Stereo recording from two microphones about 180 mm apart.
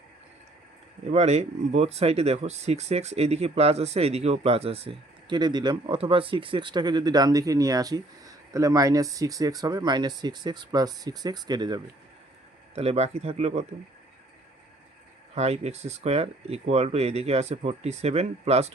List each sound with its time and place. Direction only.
1.1 s speech: 35° right (ahead or behind)
12.7 s speech: 35° right (ahead or behind)
15.4 s speech: 35° right (ahead or behind)